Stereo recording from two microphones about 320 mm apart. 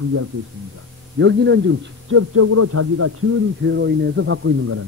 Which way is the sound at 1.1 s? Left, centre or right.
Right.